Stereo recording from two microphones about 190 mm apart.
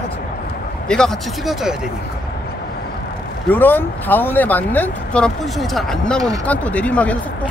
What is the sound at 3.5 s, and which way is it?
Speech, 10° left (ahead or behind).